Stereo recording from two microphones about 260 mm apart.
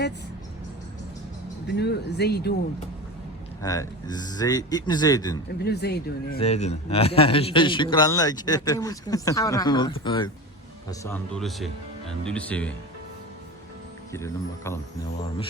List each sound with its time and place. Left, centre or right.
1.6 s speech: left
3.6 s a man's voice: centre
5.6 s speech: left
6.4 s a man's voice: left
11.0 s speech: centre
14.1 s a man's voice: centre